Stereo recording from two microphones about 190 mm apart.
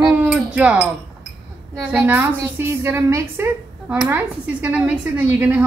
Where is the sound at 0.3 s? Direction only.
5° right (ahead or behind).